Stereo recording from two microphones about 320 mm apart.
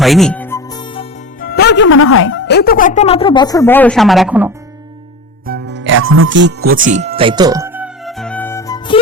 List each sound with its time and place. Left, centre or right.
0.0 s music: centre
1.4 s speech: left; by 4.5 s centre
5.5 s music: right; by 9.0 s centre